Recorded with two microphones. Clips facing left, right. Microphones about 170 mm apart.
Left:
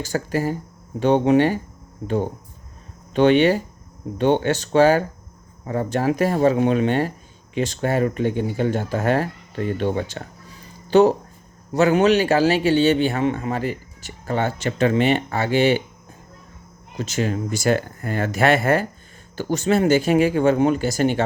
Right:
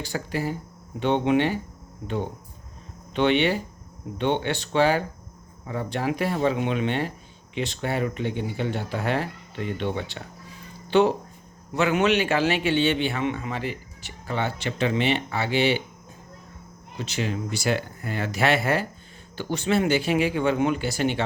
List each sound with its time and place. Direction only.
0.0 s a man's voice: 45° left (ahead or behind)
17.0 s a man's voice: 45° left (ahead or behind)